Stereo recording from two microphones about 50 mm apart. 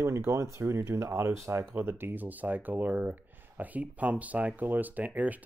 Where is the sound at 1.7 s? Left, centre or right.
Right.